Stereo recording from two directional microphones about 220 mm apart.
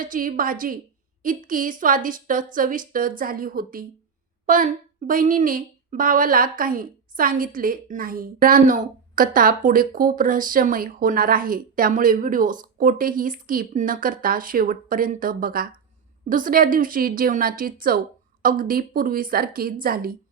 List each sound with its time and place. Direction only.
0.0 s a woman's voice: 40° right (ahead or behind)